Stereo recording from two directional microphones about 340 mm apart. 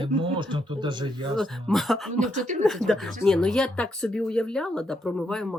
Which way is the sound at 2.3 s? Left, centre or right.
Right.